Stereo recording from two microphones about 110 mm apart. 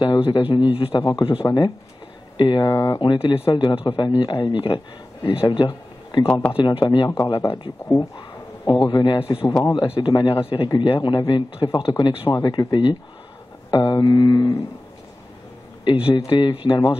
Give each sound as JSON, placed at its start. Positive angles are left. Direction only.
{"t": 0.0, "sound": "a man's voice", "side_deg": 45}
{"t": 2.7, "sound": "speech", "side_deg": 25}
{"t": 3.0, "sound": "a man's voice", "side_deg": 45}
{"t": 8.8, "sound": "a man's voice", "side_deg": 45}
{"t": 9.5, "sound": "a sound", "side_deg": 35}
{"t": 9.8, "sound": "a man's voice", "side_deg": 45}
{"t": 13.7, "sound": "a sound", "side_deg": 40}
{"t": 15.8, "sound": "a man's voice", "side_deg": 50}